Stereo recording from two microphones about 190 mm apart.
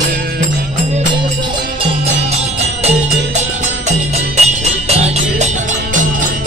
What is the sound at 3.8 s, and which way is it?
Music, 35° right (ahead or behind).